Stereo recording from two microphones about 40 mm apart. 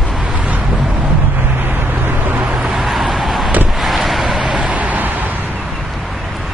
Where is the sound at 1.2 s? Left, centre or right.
Right.